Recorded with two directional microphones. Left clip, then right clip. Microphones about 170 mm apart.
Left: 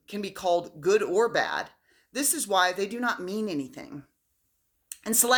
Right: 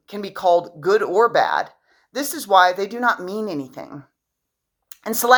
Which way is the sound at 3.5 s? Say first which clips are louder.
Right 5 dB; 15° left (ahead or behind).